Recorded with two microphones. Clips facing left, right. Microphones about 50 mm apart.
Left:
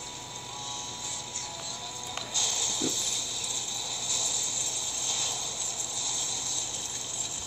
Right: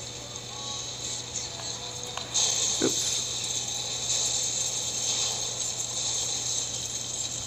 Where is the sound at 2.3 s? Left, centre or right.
Left.